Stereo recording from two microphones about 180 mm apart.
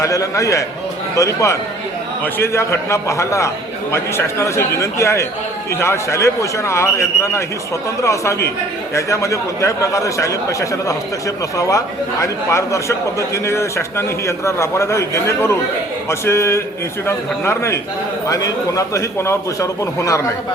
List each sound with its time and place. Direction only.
0.0 s a man's voice: 20° left (ahead or behind)
12.2 s a man's voice: 15° left (ahead or behind)